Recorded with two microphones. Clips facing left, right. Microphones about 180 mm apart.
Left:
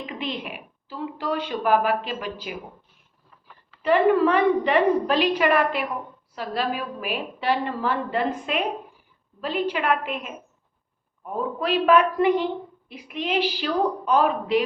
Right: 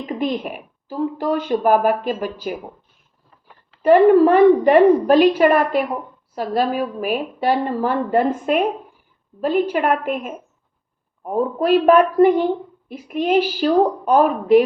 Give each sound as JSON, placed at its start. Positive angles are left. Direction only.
{"t": 0.0, "sound": "a woman's voice", "side_deg": -45}
{"t": 3.8, "sound": "a woman's voice", "side_deg": -45}